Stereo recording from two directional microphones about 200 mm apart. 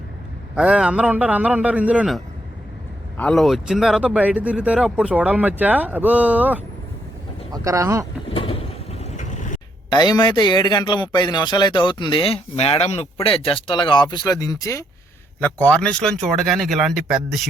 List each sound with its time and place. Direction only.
0.5 s speech: 5° right (ahead or behind)
8.3 s vehicle: 25° left (ahead or behind)
9.9 s a man's voice: 20° left (ahead or behind); by 17.4 s centre (ahead or behind)